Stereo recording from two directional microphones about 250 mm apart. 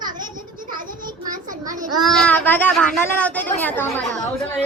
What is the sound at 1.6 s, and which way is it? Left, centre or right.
Speech, centre.